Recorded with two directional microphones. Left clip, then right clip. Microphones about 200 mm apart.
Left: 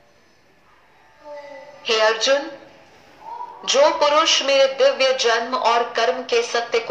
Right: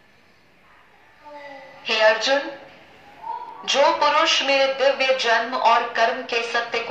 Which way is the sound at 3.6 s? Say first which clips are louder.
Left 2 dB; 40° left (ahead or behind).